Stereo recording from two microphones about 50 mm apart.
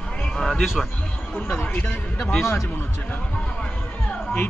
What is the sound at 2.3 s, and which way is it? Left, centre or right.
Speech, left.